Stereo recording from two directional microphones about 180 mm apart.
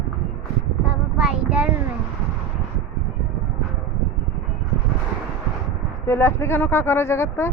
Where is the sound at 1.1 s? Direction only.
5° right (ahead or behind).